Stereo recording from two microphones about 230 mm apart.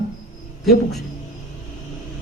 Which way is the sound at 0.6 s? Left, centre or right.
Centre.